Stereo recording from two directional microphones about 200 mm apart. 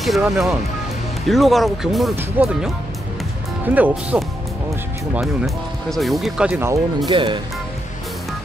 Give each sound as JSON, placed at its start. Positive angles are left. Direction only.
{"t": 0.0, "sound": "speech", "side_deg": 0}
{"t": 5.2, "sound": "speech", "side_deg": 0}
{"t": 7.1, "sound": "speech", "side_deg": -25}